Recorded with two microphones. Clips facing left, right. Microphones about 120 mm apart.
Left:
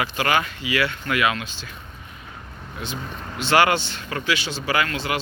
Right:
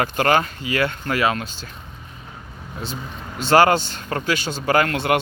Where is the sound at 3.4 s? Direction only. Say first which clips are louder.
Right 4 dB; 40° right (ahead or behind); by 5.2 s 55° right (ahead or behind).